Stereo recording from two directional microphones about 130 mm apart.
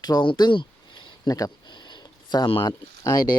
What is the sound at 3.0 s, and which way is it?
Speech, 30° left (ahead or behind).